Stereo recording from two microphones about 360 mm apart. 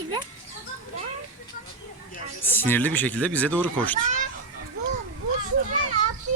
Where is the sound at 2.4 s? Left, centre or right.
Centre.